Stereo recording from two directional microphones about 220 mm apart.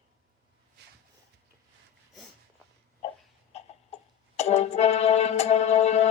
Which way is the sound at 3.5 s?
30° left (ahead or behind).